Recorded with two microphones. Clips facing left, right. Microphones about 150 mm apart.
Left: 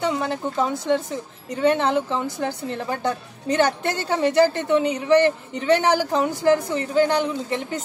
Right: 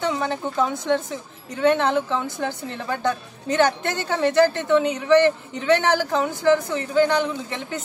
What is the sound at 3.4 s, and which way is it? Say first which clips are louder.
Speech: even; 35° left (ahead or behind).